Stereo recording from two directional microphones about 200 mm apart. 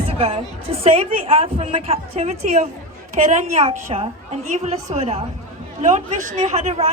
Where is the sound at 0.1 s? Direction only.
30° right (ahead or behind).